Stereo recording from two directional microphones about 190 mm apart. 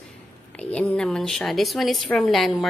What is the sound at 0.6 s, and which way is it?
A woman's voice, 5° left (ahead or behind).